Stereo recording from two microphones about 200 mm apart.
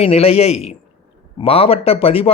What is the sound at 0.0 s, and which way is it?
A man's voice, 30° left (ahead or behind).